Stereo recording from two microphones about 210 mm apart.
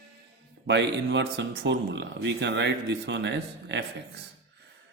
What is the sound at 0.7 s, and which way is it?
Speech, 55° right (ahead or behind).